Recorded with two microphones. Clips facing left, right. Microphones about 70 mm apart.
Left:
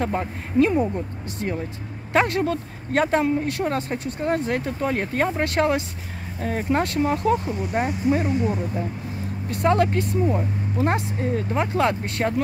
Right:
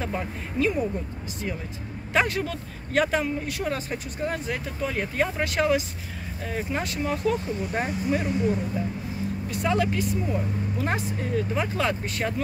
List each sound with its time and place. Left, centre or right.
0.0 s speech: left
2.1 s speech: left
7.0 s speech: left
7.4 s speech: left
9.5 s speech: left